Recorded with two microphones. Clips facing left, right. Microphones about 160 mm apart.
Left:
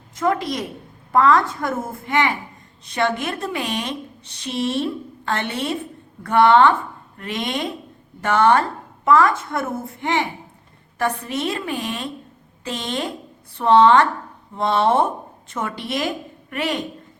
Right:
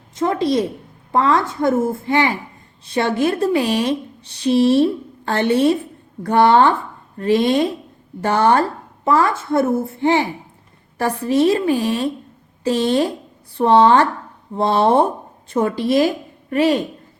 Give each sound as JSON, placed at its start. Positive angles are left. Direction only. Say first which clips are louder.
{"t": 0.2, "sound": "a woman's voice", "louder": "right 4 dB", "side_deg": -30}